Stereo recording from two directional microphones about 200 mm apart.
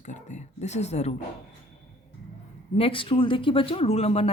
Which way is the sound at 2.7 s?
25° left (ahead or behind).